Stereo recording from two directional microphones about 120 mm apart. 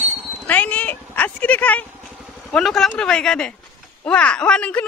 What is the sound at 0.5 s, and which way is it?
Speech, 15° left (ahead or behind).